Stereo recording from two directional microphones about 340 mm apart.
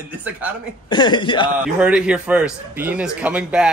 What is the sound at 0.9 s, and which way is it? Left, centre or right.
Speech, centre.